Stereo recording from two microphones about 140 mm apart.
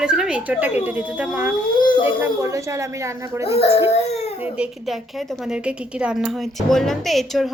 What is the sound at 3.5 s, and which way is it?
Speech, 45° left (ahead or behind).